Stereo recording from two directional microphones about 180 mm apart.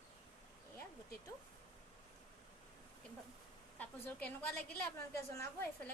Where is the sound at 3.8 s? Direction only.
10° left (ahead or behind).